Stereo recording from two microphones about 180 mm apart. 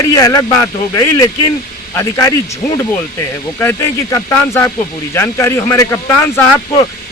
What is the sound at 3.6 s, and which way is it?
Speech, 15° left (ahead or behind).